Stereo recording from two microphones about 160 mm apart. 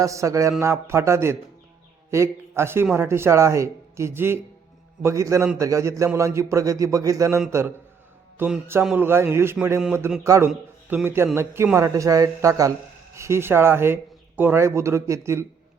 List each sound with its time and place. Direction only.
0.0 s a man's voice: 20° right (ahead or behind)
9.0 s speech: 15° right (ahead or behind)